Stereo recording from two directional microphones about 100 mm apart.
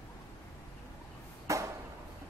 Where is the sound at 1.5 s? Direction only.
30° right (ahead or behind).